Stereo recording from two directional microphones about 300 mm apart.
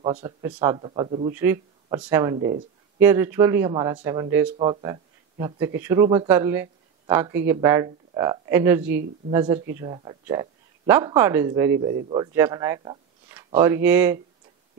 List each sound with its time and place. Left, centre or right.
0.0 s speech: centre